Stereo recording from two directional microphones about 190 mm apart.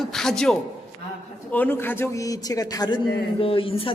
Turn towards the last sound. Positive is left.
turn(degrees=30)  # may be behind; listen again after turning